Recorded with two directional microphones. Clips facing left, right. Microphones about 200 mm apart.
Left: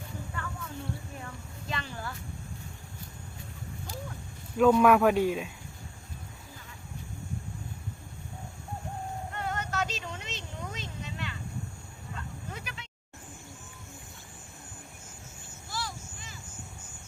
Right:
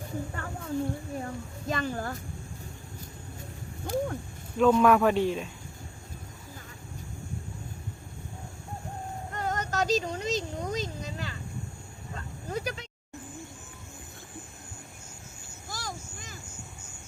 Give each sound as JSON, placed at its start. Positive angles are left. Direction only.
{"t": 0.3, "sound": "wild animals", "side_deg": -35}
{"t": 1.2, "sound": "a child's voice", "side_deg": -45}
{"t": 3.8, "sound": "speech", "side_deg": -55}
{"t": 4.5, "sound": "speech", "side_deg": 5}
{"t": 9.3, "sound": "a sound", "side_deg": -40}
{"t": 12.1, "sound": "dog", "side_deg": -40}
{"t": 15.7, "sound": "a sound", "side_deg": -45}